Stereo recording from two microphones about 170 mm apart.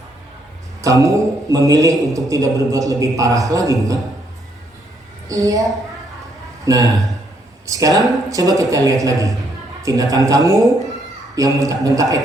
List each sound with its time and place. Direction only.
1.0 s a man's voice: 20° right (ahead or behind)
5.3 s a man's voice: 20° right (ahead or behind)